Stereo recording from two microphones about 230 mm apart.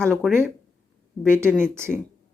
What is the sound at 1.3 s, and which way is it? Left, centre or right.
Speech, centre.